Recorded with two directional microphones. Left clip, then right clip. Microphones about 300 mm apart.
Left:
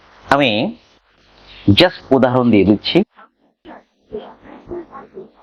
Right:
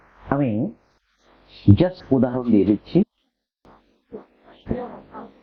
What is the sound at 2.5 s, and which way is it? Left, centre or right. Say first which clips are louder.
Speech: left 6 dB; left.